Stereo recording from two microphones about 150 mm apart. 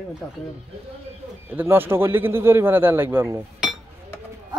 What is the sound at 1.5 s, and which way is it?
A man's voice, 15° right (ahead or behind).